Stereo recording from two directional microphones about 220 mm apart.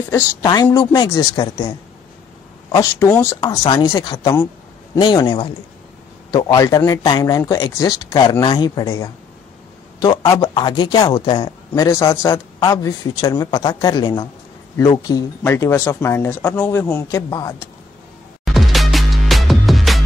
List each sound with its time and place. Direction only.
0.1 s a man's voice: 20° left (ahead or behind)
2.7 s a man's voice: 15° left (ahead or behind)
11.7 s speech: 15° left (ahead or behind)
18.4 s music: centre (ahead or behind)